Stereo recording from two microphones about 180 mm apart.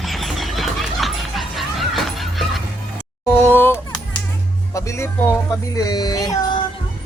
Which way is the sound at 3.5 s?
10° left (ahead or behind).